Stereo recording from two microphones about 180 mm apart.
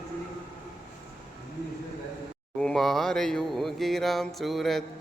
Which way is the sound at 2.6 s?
5° left (ahead or behind).